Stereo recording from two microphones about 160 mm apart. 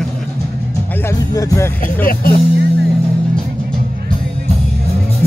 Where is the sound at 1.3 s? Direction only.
20° left (ahead or behind).